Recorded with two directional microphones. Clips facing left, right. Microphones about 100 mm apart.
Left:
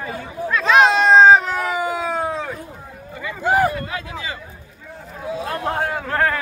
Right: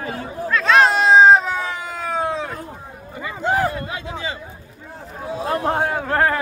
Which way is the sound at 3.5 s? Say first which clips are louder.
Left 2 dB; 10° left (ahead or behind).